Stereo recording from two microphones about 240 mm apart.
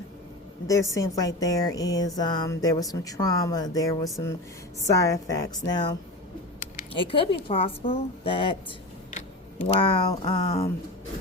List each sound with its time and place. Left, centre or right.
0.7 s a woman's voice: centre
9.6 s a woman's voice: centre